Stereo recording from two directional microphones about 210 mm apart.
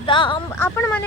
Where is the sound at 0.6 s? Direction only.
10° left (ahead or behind).